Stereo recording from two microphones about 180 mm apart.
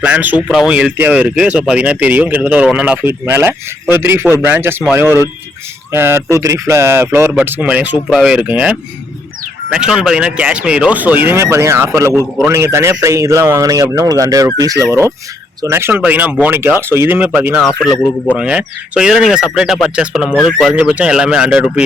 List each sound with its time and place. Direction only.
0.0 s speech: 10° right (ahead or behind)
5.9 s speech: 10° right (ahead or behind)
17.6 s speech: 5° left (ahead or behind)